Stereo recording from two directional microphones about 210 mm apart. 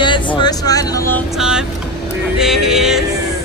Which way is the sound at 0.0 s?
20° left (ahead or behind).